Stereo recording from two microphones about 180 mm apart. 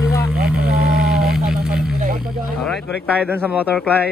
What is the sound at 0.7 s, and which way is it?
Vehicle, 60° right (ahead or behind).